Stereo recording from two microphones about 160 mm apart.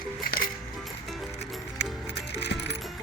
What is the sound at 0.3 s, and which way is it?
Music, 60° left (ahead or behind).